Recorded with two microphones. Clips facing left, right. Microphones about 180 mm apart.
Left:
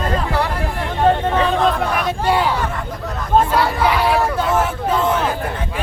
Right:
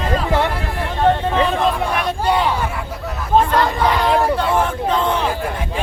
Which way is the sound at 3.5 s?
10° left (ahead or behind).